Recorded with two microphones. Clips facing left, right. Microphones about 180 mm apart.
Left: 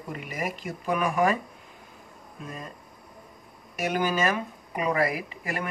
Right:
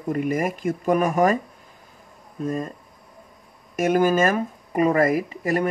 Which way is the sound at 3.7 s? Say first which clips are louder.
Right 8 dB; 45° right (ahead or behind).